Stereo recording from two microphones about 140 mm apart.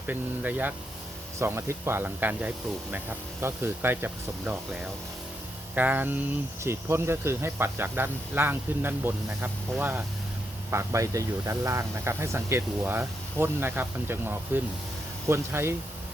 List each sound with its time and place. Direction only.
0.1 s speech: 10° right (ahead or behind)